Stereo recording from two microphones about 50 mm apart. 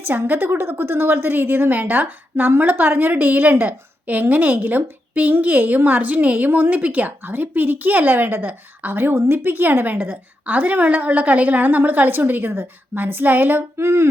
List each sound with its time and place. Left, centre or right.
0.0 s a woman's voice: right
10.4 s a woman's voice: right
13.7 s a sound: right